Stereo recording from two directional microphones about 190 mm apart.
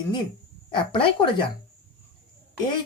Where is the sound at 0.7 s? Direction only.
25° left (ahead or behind).